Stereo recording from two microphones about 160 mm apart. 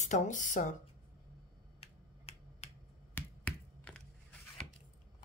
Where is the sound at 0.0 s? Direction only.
50° left (ahead or behind).